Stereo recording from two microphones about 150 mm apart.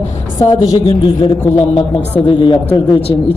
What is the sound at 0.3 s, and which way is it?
A woman's voice, 35° left (ahead or behind).